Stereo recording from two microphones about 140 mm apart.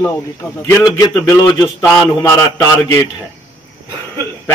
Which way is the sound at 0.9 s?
25° left (ahead or behind).